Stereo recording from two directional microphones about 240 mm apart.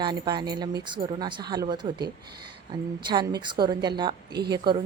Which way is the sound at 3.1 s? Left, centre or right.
Centre.